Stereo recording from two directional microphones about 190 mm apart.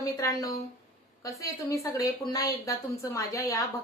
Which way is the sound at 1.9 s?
20° left (ahead or behind).